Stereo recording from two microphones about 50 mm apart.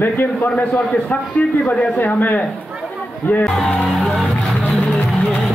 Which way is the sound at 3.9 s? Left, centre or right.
Centre.